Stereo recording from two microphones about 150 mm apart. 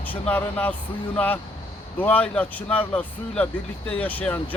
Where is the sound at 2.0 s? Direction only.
10° left (ahead or behind).